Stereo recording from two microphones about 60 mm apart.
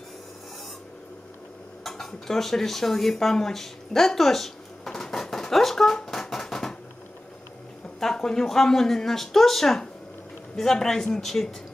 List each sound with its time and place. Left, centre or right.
1.9 s dishes: centre
8.0 s speech: centre